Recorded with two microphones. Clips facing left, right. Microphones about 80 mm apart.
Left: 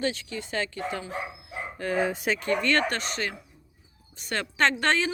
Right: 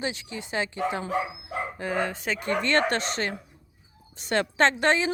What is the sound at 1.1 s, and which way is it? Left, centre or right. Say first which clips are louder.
Dog: right 6 dB; right.